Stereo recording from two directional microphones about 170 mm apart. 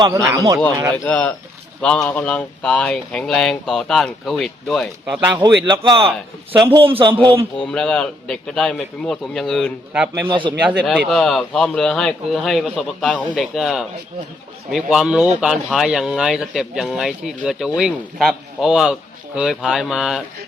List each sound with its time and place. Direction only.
0.0 s speech: 20° right (ahead or behind)
1.0 s speech: 10° left (ahead or behind)
5.6 s a man's voice: 25° right (ahead or behind)
7.6 s speech: 5° left (ahead or behind)
9.9 s speech: 10° right (ahead or behind)
10.2 s speech: 30° right (ahead or behind)
10.6 s speech: 10° right (ahead or behind)